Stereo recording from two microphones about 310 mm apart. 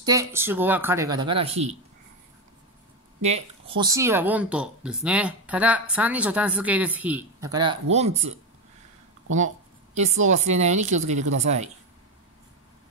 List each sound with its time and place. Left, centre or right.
0.0 s speech: centre
3.2 s speech: right
10.2 s speech: right